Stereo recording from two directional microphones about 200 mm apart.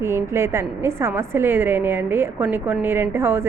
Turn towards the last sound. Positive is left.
turn(degrees=-10)  # may be behind; listen again after turning